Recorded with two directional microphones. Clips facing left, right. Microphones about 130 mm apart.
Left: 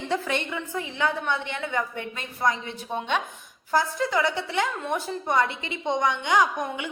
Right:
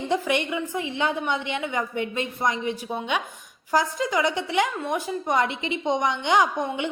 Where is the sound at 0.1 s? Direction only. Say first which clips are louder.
Right 3 dB; 15° right (ahead or behind).